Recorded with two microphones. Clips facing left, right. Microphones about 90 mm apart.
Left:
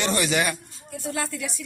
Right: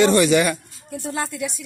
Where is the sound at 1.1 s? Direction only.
20° right (ahead or behind).